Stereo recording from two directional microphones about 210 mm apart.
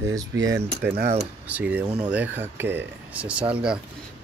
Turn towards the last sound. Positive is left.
turn(degrees=-5)  # may be behind; listen again after turning